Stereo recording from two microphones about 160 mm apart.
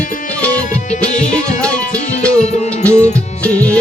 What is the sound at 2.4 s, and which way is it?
Music, 45° left (ahead or behind).